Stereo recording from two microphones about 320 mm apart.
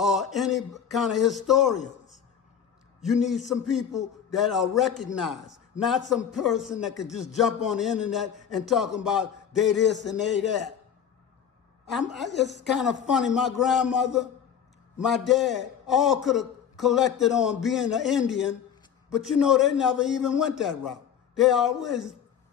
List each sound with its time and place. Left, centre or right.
0.0 s a man's voice: centre
3.0 s a man's voice: centre
11.9 s a man's voice: centre